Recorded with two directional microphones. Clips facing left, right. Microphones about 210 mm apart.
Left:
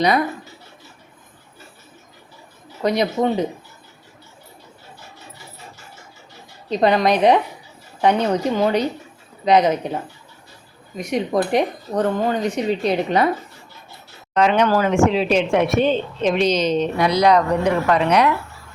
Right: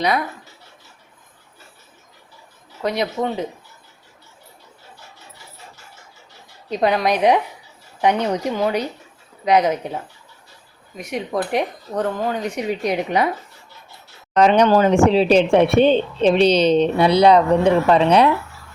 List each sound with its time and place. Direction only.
2.8 s speech: 5° right (ahead or behind)
6.7 s speech: 10° right (ahead or behind)
14.3 s a woman's voice: 40° right (ahead or behind)